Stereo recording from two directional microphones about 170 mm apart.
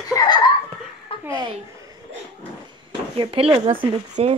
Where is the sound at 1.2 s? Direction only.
25° right (ahead or behind).